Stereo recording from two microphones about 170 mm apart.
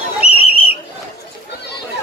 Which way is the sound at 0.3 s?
35° left (ahead or behind).